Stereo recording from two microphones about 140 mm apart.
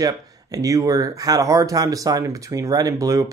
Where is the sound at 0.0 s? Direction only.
25° right (ahead or behind).